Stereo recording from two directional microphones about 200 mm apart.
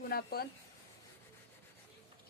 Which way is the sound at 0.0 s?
50° left (ahead or behind).